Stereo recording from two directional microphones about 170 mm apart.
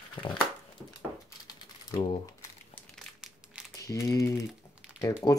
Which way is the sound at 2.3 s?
15° left (ahead or behind).